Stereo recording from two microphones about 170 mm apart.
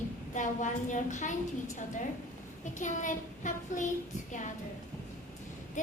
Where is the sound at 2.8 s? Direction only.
50° left (ahead or behind).